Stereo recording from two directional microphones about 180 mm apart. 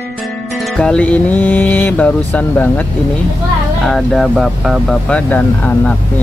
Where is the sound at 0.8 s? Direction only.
5° left (ahead or behind).